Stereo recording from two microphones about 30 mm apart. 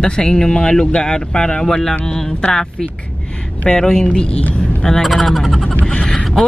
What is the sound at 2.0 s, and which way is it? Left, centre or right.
Music, centre.